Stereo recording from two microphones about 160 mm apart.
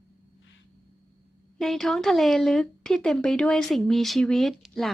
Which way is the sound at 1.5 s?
Centre (ahead or behind).